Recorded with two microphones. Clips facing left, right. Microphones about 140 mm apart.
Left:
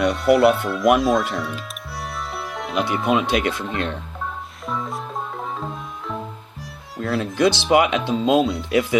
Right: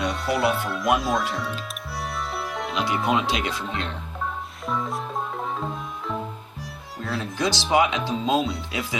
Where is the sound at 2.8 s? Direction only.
Centre (ahead or behind).